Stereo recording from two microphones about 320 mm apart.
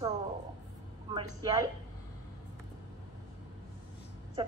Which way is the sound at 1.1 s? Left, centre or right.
Centre.